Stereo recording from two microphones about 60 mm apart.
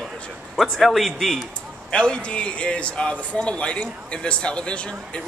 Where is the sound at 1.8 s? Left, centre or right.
Centre.